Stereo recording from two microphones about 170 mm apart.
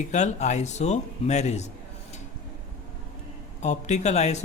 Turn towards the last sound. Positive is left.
turn(degrees=40)  # may be behind; listen again after turning